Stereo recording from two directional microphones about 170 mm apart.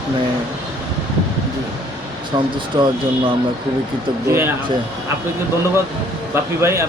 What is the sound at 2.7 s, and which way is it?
Speech, 25° right (ahead or behind).